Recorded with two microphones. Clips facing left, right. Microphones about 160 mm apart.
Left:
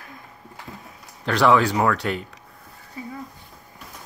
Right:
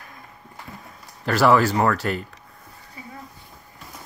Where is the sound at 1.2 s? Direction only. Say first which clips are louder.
Right 1 dB; 5° right (ahead or behind).